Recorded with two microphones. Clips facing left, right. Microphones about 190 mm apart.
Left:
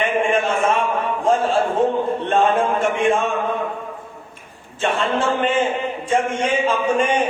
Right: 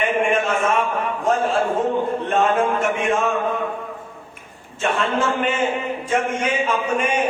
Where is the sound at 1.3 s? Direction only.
30° left (ahead or behind).